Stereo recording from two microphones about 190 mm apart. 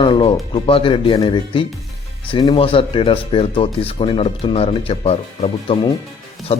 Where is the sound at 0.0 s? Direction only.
25° left (ahead or behind).